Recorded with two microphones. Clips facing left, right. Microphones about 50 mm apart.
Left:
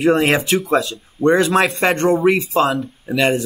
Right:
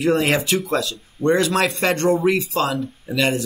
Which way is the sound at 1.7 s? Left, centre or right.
Left.